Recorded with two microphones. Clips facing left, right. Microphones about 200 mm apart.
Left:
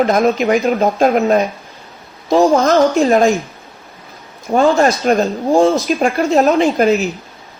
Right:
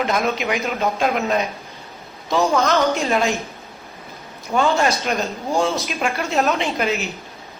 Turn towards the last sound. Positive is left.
turn(degrees=45)  # may be behind; listen again after turning